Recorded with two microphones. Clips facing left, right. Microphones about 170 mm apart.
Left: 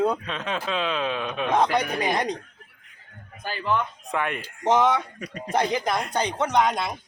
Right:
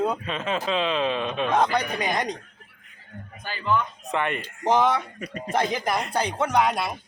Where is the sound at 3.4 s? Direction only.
30° left (ahead or behind).